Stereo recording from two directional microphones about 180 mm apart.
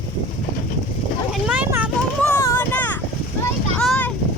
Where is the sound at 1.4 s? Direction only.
10° right (ahead or behind).